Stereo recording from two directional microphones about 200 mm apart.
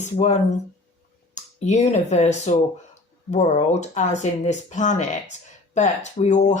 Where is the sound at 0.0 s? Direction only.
35° left (ahead or behind).